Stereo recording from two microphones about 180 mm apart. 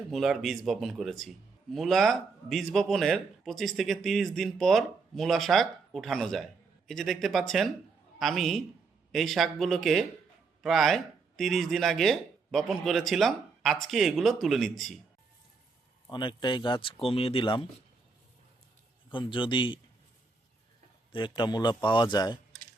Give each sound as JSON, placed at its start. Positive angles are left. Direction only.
{"t": 0.1, "sound": "speech", "side_deg": 0}
{"t": 16.0, "sound": "speech", "side_deg": 25}
{"t": 19.1, "sound": "speech", "side_deg": 25}
{"t": 21.1, "sound": "speech", "side_deg": 25}